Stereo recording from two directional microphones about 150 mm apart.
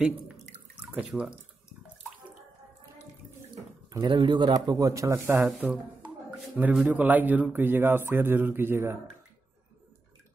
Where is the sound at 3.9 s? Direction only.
30° right (ahead or behind).